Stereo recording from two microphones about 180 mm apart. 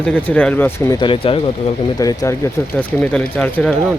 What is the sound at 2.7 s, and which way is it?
Speech, 5° left (ahead or behind).